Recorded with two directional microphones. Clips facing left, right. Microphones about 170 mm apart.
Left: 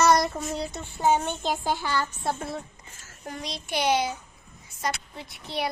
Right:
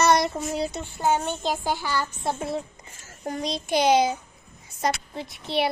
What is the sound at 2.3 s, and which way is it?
Speech, 25° right (ahead or behind).